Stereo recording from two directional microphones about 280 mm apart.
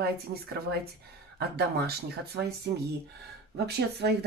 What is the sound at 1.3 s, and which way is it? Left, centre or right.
Speech, right.